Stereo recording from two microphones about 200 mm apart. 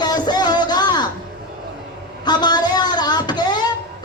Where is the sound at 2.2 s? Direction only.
20° left (ahead or behind).